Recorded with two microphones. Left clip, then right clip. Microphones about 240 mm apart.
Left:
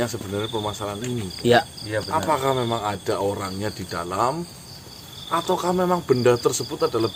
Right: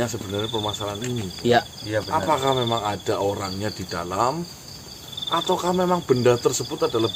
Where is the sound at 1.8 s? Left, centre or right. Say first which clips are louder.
Right 1 dB; centre.